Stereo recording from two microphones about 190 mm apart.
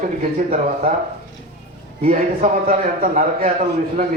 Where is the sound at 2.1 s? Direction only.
45° right (ahead or behind).